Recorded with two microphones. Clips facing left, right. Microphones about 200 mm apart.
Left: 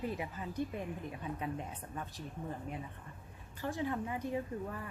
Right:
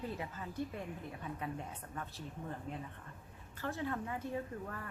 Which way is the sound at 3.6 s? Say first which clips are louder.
Left 2 dB; 15° left (ahead or behind).